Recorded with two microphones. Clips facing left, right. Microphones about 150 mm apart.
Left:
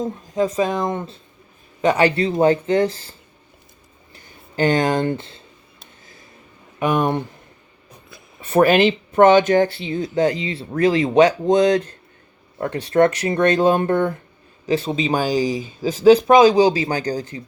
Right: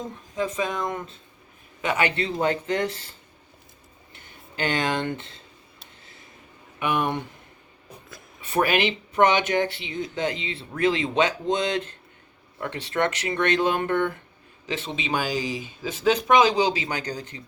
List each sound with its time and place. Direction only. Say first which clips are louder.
0.3 s speech: left 7 dB; 40° left (ahead or behind)
6.7 s speech: left 6 dB; 40° left (ahead or behind)
8.4 s speech: left 8 dB; 45° left (ahead or behind)
10.2 s speech: left 8 dB; 25° right (ahead or behind)
11.0 s speech: left 9 dB; 40° left (ahead or behind)